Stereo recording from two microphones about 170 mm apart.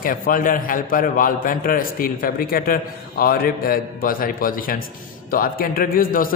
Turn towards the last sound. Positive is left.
turn(degrees=55)  # may be behind; listen again after turning